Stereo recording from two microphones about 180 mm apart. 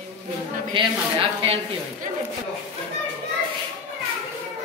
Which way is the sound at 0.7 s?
30° right (ahead or behind).